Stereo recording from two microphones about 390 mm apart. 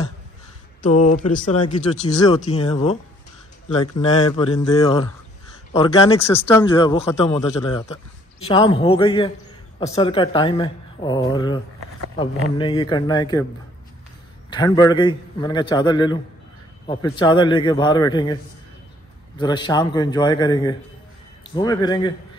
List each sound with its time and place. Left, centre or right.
0.8 s speech: centre
4.4 s speech: centre
14.5 s speech: centre